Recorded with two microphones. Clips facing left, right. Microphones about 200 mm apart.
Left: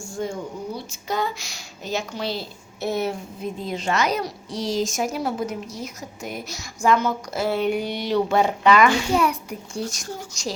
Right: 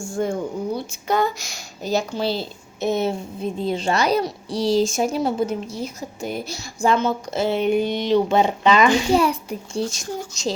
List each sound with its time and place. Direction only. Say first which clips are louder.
0.2 s speech: right 5 dB; 55° right (ahead or behind); by 10.5 s 25° right (ahead or behind)